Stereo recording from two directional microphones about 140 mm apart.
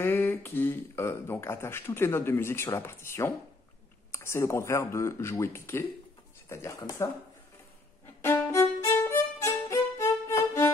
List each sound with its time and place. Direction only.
0.0 s speech: 15° left (ahead or behind)
8.2 s violin: 20° left (ahead or behind)